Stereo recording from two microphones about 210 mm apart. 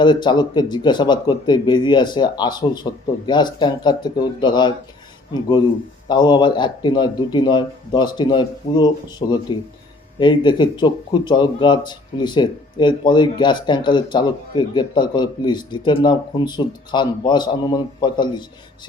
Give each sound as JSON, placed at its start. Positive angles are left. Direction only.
{"t": 0.0, "sound": "speech", "side_deg": 20}